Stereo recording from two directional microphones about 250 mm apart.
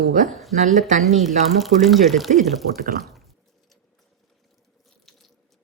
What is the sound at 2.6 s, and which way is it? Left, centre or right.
Speech, right.